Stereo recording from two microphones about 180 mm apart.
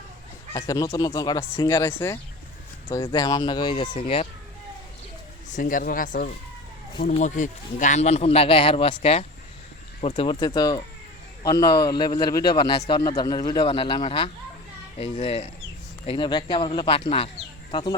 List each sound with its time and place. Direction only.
0.5 s a man's voice: 20° left (ahead or behind)
5.5 s a man's voice: 45° left (ahead or behind); by 17.9 s 25° left (ahead or behind)